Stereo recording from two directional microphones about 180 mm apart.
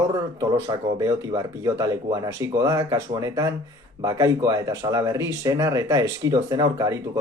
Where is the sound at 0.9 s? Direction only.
20° right (ahead or behind).